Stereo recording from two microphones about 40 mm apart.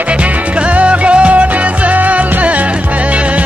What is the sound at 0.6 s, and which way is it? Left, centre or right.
Music, right.